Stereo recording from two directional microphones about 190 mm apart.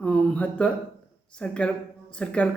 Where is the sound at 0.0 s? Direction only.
5° left (ahead or behind).